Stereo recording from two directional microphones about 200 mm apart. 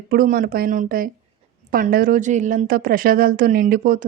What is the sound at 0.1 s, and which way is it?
Speech, 45° right (ahead or behind).